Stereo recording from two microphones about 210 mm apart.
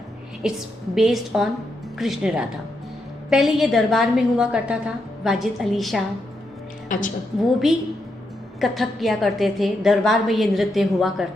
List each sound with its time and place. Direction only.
0.4 s a woman's voice: centre (ahead or behind)
6.8 s a woman's voice: 40° left (ahead or behind)
7.3 s a woman's voice: centre (ahead or behind)